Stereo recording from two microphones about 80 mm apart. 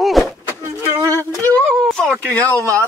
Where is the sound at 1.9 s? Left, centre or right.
Centre.